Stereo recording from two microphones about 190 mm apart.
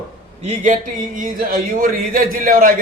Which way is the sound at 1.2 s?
45° right (ahead or behind).